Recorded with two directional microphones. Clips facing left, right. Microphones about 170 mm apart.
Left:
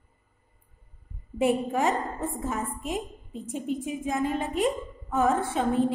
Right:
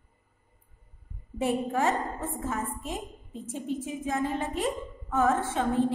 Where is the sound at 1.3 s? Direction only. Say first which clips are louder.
Left 3 dB; 15° left (ahead or behind).